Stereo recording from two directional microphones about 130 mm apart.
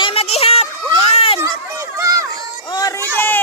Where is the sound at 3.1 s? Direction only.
15° left (ahead or behind).